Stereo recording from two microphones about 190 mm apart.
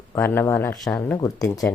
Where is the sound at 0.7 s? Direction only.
Centre (ahead or behind).